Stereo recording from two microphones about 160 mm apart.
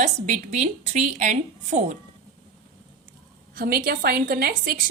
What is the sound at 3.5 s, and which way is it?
A woman's voice, 65° right (ahead or behind).